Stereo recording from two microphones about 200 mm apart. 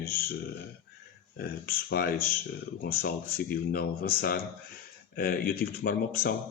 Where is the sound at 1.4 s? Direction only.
50° left (ahead or behind).